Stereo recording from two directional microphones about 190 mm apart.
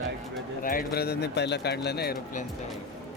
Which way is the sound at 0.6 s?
50° left (ahead or behind).